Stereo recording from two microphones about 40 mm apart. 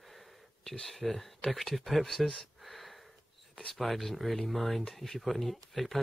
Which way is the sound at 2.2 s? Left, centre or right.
Centre.